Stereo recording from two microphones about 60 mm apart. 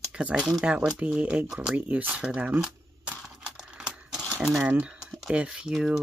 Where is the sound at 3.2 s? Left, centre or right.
Centre.